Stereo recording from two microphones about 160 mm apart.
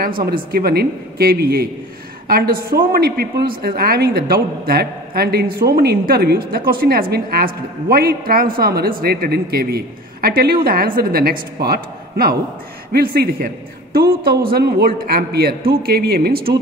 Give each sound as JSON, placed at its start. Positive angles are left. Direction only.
{"t": 0.0, "sound": "a woman's voice", "side_deg": -65}